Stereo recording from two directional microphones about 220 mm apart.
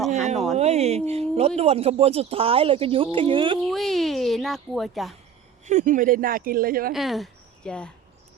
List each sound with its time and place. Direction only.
0.5 s speech: 30° right (ahead or behind)
3.7 s a woman's voice: centre (ahead or behind)
5.6 s speech: 35° right (ahead or behind)
6.9 s speech: centre (ahead or behind)